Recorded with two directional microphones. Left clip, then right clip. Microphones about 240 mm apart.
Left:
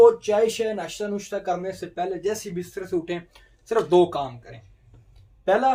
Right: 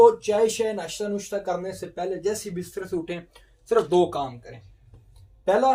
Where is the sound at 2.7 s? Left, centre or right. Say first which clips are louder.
Left 3 dB; left.